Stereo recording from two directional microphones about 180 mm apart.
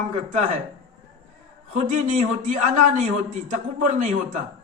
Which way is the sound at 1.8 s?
45° right (ahead or behind).